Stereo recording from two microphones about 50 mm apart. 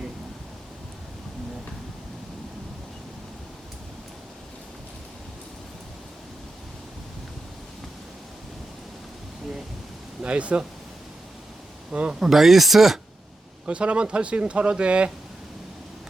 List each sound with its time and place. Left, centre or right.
10.2 s speech: right
11.9 s a man's voice: right
12.2 s speech: centre
13.7 s speech: right